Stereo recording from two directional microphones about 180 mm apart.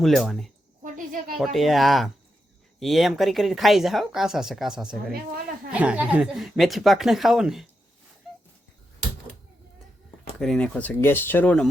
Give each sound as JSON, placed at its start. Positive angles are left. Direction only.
{"t": 0.0, "sound": "speech", "side_deg": 0}
{"t": 0.9, "sound": "a sound", "side_deg": -45}
{"t": 1.4, "sound": "speech", "side_deg": 0}
{"t": 10.4, "sound": "speech", "side_deg": 5}